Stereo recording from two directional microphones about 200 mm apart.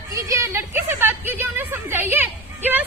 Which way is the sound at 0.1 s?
15° right (ahead or behind).